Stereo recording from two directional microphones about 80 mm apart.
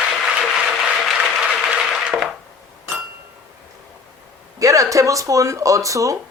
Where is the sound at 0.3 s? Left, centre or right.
Centre.